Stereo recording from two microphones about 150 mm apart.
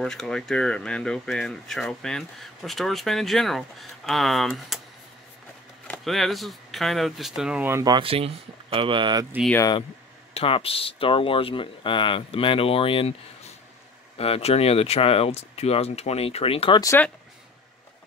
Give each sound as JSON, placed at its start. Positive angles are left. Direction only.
{"t": 0.0, "sound": "speech", "side_deg": 5}
{"t": 5.9, "sound": "speech", "side_deg": 0}
{"t": 7.7, "sound": "speech", "side_deg": -25}
{"t": 8.0, "sound": "speech", "side_deg": -40}
{"t": 10.3, "sound": "speech", "side_deg": 40}
{"t": 16.8, "sound": "speech", "side_deg": 15}